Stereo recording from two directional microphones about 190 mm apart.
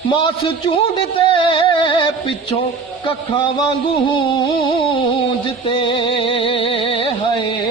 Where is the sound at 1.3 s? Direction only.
25° left (ahead or behind).